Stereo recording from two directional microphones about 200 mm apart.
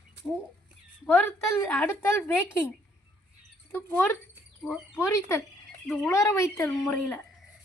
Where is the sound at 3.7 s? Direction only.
10° left (ahead or behind).